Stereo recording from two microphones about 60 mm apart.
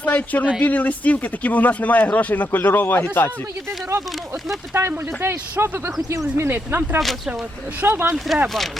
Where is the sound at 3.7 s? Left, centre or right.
Right.